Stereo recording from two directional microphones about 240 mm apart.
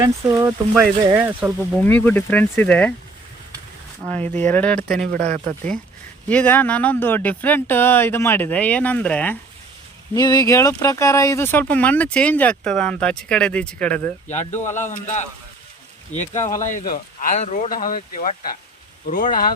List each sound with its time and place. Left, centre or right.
0.0 s speech: centre
1.8 s speech: centre
4.1 s speech: centre
5.1 s speech: right
6.2 s speech: centre
14.3 s a man's voice: left